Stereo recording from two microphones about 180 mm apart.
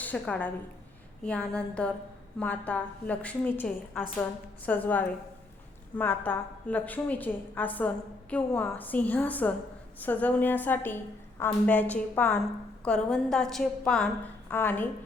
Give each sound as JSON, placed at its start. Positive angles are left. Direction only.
{"t": 0.0, "sound": "a woman's voice", "side_deg": 10}